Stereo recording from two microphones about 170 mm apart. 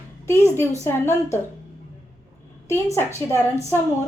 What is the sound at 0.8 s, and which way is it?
Speech, 15° left (ahead or behind).